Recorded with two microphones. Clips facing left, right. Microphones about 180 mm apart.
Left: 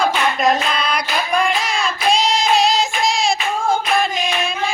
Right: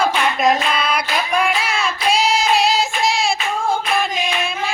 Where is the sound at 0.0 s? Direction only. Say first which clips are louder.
Even; 5° right (ahead or behind).